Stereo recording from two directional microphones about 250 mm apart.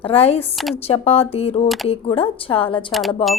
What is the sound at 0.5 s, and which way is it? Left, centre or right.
Speech, centre.